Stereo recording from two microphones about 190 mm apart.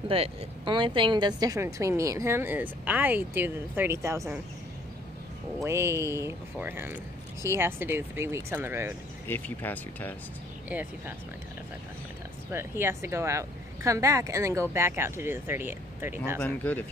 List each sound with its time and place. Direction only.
0.1 s a woman's voice: 30° right (ahead or behind)
5.6 s a woman's voice: 15° right (ahead or behind)
9.3 s speech: 10° left (ahead or behind)
10.7 s a woman's voice: 10° right (ahead or behind)
12.4 s a woman's voice: 10° right (ahead or behind)
16.3 s speech: 5° left (ahead or behind)